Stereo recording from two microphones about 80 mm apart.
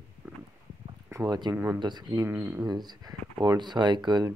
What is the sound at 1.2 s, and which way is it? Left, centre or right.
Speech, right.